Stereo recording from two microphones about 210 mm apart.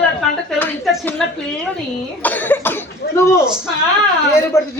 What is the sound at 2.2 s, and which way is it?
Speech, 10° left (ahead or behind).